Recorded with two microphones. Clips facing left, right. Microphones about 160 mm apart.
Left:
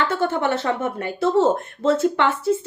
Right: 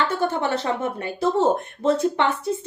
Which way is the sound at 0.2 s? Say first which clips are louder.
Left 2 dB; 20° right (ahead or behind).